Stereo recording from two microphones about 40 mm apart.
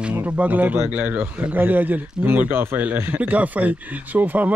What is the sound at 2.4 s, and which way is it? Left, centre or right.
Speech, right.